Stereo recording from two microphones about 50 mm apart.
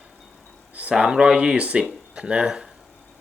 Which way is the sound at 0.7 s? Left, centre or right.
Right.